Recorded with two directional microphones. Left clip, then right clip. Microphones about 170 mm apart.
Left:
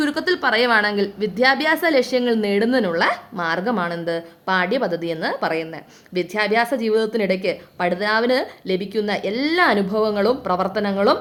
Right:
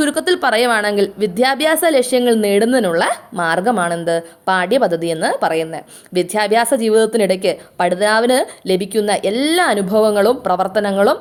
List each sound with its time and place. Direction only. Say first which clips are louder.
0.0 s a woman's voice: right 4 dB; 25° right (ahead or behind)